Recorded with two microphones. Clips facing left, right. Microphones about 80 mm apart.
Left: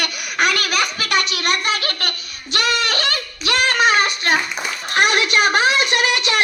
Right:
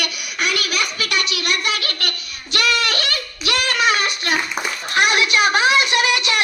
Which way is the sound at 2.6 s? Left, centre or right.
Left.